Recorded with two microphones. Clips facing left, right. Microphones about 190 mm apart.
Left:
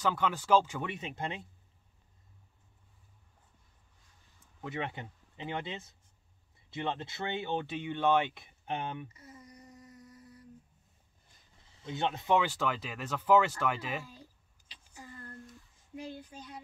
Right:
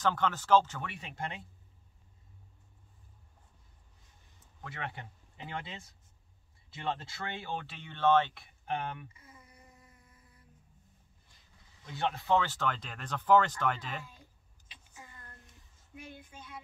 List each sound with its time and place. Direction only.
0.0 s speech: 10° left (ahead or behind)
4.6 s speech: 20° left (ahead or behind)
9.1 s a sound: 40° left (ahead or behind)
11.8 s speech: 20° left (ahead or behind)
14.7 s vehicle: 35° left (ahead or behind)
16.2 s child singing: 35° left (ahead or behind)